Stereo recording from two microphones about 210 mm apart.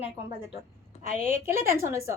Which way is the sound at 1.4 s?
10° right (ahead or behind).